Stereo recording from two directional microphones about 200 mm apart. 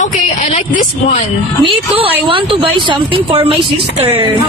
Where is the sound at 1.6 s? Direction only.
25° right (ahead or behind).